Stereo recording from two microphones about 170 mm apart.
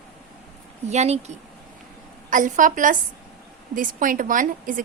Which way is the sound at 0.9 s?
40° right (ahead or behind).